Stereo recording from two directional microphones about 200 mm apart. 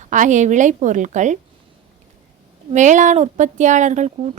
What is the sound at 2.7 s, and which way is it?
A woman's voice, 35° right (ahead or behind).